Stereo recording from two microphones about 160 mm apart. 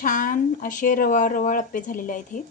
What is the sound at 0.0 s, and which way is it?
A woman's voice, 55° left (ahead or behind).